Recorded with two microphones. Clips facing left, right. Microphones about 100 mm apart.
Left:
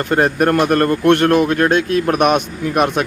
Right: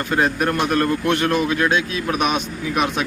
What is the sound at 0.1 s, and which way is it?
A man's voice, 55° left (ahead or behind).